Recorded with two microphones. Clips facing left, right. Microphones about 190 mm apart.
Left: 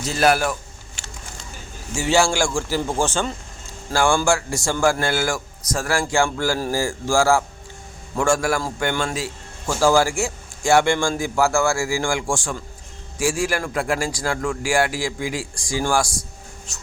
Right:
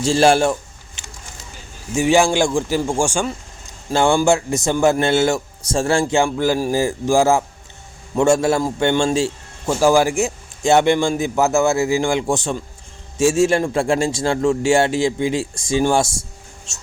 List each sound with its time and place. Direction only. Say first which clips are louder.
0.0 s a man's voice: right 5 dB; 30° right (ahead or behind)
1.0 s a sound: even; 20° right (ahead or behind)
2.0 s a man's voice: right 4 dB; 15° right (ahead or behind)